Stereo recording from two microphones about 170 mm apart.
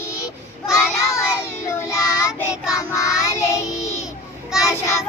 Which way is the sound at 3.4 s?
15° left (ahead or behind).